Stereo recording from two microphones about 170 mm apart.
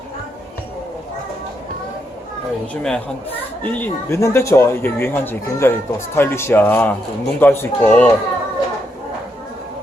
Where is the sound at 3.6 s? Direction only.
10° left (ahead or behind).